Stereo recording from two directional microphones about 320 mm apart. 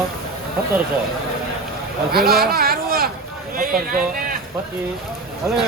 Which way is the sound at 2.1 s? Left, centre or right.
Right.